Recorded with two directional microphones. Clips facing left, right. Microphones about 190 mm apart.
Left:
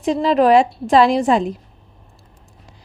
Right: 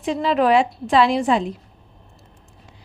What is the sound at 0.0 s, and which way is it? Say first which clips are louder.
A woman's voice: left 4 dB; 40° left (ahead or behind).